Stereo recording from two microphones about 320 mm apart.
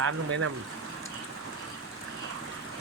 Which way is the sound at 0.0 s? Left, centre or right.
Right.